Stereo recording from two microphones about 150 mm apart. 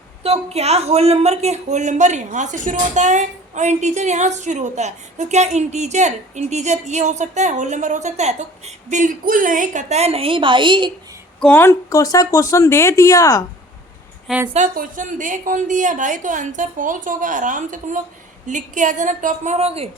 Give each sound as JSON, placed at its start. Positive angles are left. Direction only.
{"t": 0.2, "sound": "a woman's voice", "side_deg": -45}
{"t": 11.3, "sound": "speech", "side_deg": 5}
{"t": 11.6, "sound": "speech", "side_deg": 20}
{"t": 14.3, "sound": "a woman's voice", "side_deg": -10}
{"t": 14.5, "sound": "a woman's voice", "side_deg": -60}